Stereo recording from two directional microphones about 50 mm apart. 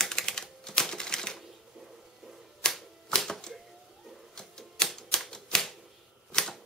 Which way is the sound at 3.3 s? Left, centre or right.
Centre.